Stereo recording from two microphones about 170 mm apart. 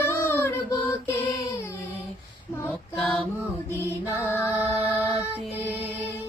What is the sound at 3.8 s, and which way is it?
Music, 15° left (ahead or behind).